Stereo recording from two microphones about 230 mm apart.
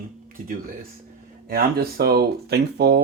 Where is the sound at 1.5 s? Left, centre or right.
Right.